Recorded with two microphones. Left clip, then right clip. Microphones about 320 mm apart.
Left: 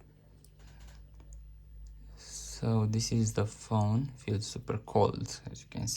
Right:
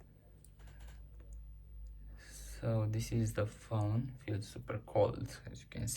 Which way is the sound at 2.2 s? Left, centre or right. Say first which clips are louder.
Left 6 dB; centre.